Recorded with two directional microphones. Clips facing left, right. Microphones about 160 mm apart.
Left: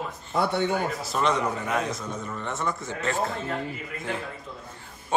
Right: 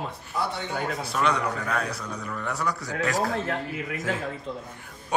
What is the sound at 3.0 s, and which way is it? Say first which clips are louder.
Speech: right 4 dB; 90° right.